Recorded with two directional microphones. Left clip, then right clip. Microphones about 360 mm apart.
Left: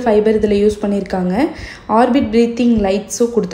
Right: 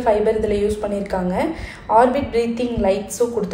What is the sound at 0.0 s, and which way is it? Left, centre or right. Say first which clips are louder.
A woman's voice: left 4 dB; left.